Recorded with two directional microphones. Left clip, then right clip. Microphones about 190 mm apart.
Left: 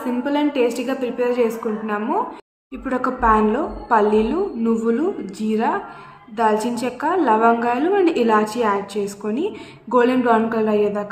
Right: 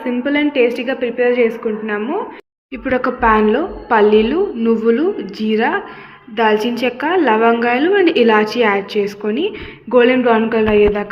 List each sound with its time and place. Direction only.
0.0 s a woman's voice: centre (ahead or behind)